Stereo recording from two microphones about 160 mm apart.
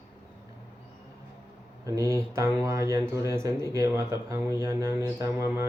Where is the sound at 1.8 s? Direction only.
20° right (ahead or behind).